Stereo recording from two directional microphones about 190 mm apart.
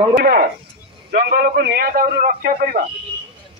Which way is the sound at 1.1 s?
55° right (ahead or behind).